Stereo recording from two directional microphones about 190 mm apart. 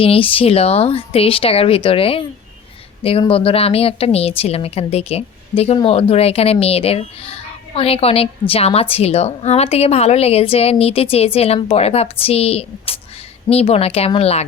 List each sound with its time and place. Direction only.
0.0 s a woman's voice: 30° left (ahead or behind)